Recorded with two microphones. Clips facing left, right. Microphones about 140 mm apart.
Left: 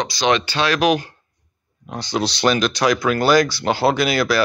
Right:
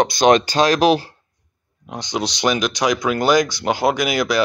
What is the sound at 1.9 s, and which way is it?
Speech, 15° right (ahead or behind).